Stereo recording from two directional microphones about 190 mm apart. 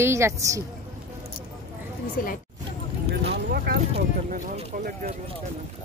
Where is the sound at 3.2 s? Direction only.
55° right (ahead or behind).